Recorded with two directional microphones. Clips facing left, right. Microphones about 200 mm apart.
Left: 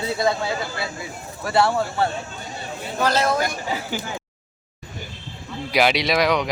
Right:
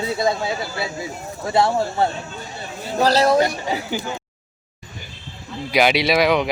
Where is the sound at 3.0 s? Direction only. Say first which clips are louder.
Right 5 dB; 35° right (ahead or behind).